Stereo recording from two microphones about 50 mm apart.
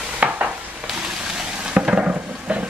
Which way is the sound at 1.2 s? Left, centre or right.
Right.